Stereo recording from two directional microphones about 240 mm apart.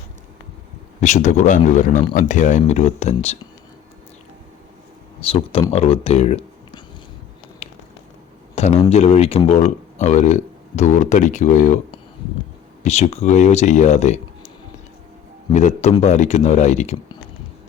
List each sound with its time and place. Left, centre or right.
1.0 s speech: left
5.2 s speech: left
7.6 s a sound: left
8.9 s speech: left
15.5 s speech: left